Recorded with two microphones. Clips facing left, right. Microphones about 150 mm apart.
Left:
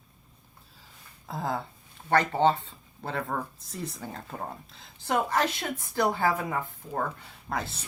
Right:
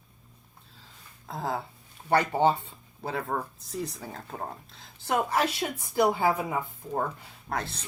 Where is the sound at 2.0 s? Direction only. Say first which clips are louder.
Even; 10° right (ahead or behind).